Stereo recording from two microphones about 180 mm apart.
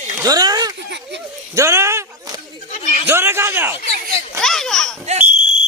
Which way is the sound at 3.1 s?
15° right (ahead or behind).